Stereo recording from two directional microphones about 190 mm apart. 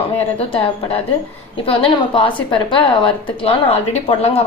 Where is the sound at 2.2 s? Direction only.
25° left (ahead or behind).